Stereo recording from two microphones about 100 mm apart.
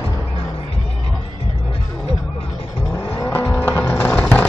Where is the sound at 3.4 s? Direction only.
20° left (ahead or behind).